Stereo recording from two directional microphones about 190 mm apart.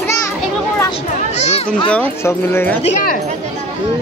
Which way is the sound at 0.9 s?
35° left (ahead or behind).